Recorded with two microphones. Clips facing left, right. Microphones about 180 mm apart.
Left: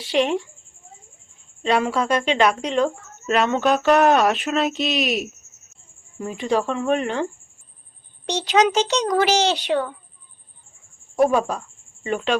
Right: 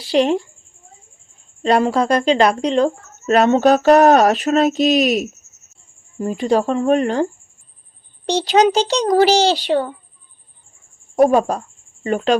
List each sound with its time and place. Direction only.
0.0 s a woman's voice: 35° right (ahead or behind)
1.6 s a woman's voice: 40° right (ahead or behind)
8.3 s a woman's voice: 35° right (ahead or behind)
11.2 s a woman's voice: 45° right (ahead or behind)